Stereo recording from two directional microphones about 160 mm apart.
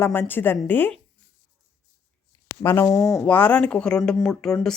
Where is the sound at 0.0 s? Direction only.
15° left (ahead or behind).